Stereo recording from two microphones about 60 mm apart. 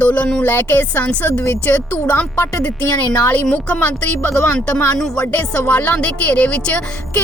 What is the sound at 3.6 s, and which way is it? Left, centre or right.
Speech, left.